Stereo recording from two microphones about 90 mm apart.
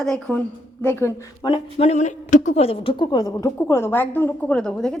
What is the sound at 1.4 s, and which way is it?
Speech, 70° left (ahead or behind).